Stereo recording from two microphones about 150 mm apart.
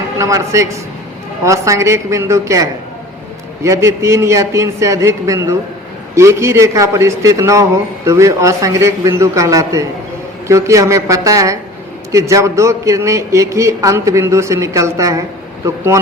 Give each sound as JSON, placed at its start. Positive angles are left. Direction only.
{"t": 0.2, "sound": "a man's voice", "side_deg": -20}